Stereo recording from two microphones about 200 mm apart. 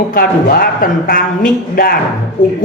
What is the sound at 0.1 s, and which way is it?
A man's voice, 45° left (ahead or behind).